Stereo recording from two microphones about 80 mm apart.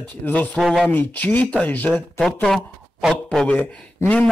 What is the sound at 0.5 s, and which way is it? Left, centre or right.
Speech, centre.